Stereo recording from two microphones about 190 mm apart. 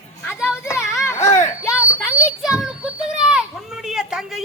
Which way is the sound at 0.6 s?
15° left (ahead or behind).